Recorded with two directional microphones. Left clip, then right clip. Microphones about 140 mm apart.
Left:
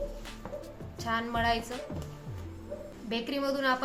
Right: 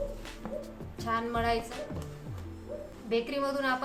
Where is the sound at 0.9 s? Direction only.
25° left (ahead or behind).